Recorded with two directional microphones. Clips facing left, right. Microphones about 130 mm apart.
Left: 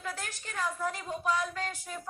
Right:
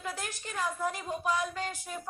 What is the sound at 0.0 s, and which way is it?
A woman's voice, 15° right (ahead or behind).